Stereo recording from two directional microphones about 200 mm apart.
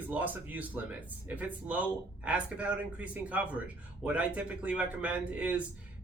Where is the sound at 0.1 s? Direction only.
10° right (ahead or behind).